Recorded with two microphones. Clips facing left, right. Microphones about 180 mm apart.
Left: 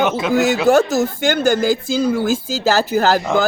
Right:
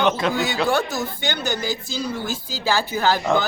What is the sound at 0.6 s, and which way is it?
Speech, 45° left (ahead or behind).